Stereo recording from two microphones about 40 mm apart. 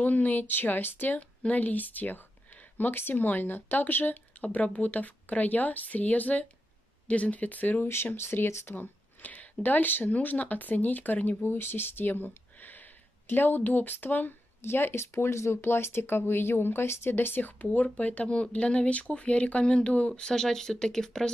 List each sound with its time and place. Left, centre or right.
0.0 s speech: left
1.5 s speech: left
4.4 s a woman's voice: left
7.8 s speech: left
8.7 s a sound: left
9.6 s speech: left
14.6 s speech: left
17.7 s a woman's voice: left
20.2 s speech: centre